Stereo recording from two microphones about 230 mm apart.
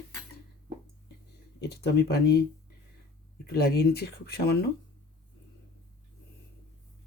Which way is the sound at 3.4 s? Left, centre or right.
Left.